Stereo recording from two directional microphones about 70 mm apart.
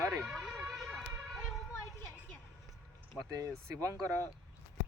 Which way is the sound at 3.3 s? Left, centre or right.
Right.